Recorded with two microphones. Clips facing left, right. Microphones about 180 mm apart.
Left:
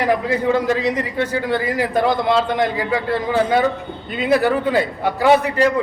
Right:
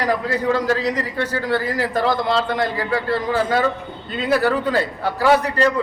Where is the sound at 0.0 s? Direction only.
20° left (ahead or behind).